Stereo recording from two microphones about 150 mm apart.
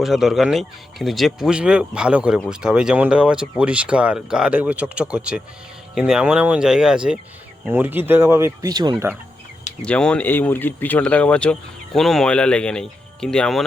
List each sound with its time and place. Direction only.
0.0 s speech: centre (ahead or behind); by 9.0 s 30° right (ahead or behind)
9.8 s speech: 5° left (ahead or behind)